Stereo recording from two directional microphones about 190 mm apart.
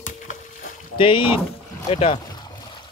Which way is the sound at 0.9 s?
25° left (ahead or behind).